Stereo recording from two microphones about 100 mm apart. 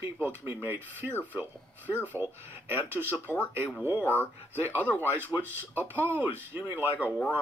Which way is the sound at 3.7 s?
20° right (ahead or behind).